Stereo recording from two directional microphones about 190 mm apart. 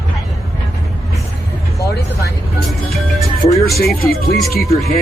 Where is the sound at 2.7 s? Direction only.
Centre (ahead or behind).